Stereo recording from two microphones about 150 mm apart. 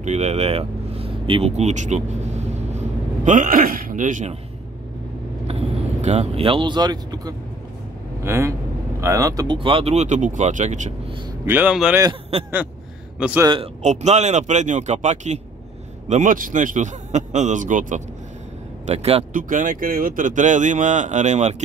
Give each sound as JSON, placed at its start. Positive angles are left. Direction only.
{"t": 0.0, "sound": "speech", "side_deg": -50}
{"t": 5.5, "sound": "speech", "side_deg": -45}
{"t": 11.4, "sound": "speech", "side_deg": -10}
{"t": 13.2, "sound": "speech", "side_deg": -10}
{"t": 13.8, "sound": "speech", "side_deg": -50}
{"t": 18.9, "sound": "speech", "side_deg": -45}
{"t": 19.3, "sound": "speech", "side_deg": -60}